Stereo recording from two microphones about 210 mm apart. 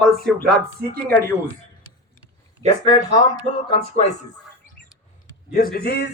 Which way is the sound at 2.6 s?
15° left (ahead or behind).